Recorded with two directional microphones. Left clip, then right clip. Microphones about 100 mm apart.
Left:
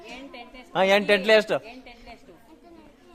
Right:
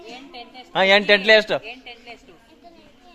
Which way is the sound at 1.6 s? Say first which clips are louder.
Right 6 dB; 20° left (ahead or behind).